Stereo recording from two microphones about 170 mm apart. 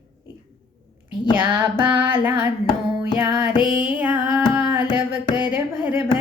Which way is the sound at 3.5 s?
25° left (ahead or behind).